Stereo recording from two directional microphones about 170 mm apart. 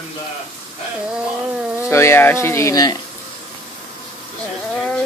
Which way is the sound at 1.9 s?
15° left (ahead or behind).